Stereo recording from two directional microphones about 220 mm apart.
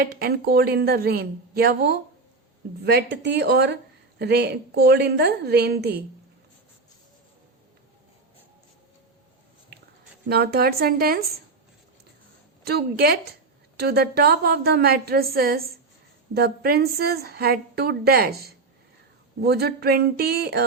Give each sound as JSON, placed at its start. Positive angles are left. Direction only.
{"t": 0.0, "sound": "a woman's voice", "side_deg": -45}
{"t": 10.2, "sound": "a woman's voice", "side_deg": -45}
{"t": 12.6, "sound": "a woman's voice", "side_deg": -45}